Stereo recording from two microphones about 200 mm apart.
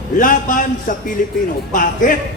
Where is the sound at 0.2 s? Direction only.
40° left (ahead or behind).